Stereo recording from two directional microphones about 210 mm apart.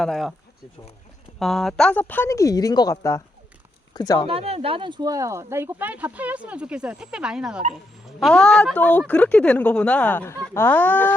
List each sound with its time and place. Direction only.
0.0 s speech: centre (ahead or behind)
1.4 s speech: centre (ahead or behind); by 4.3 s 20° left (ahead or behind)
4.3 s speech: 30° right (ahead or behind); by 11.1 s 10° left (ahead or behind)